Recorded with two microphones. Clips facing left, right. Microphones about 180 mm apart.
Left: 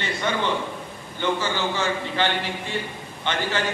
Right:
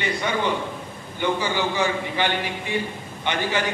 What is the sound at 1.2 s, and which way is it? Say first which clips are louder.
A man's voice: right 1 dB; 15° right (ahead or behind).